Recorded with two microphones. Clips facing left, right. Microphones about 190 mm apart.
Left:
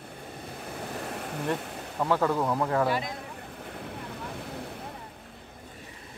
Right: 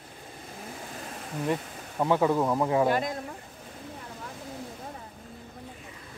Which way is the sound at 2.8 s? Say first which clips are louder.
Right 3 dB; 50° right (ahead or behind).